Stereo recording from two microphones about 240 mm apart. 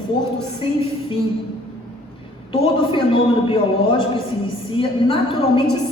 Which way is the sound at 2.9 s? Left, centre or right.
Left.